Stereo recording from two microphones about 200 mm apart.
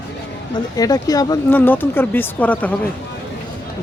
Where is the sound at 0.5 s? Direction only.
20° left (ahead or behind).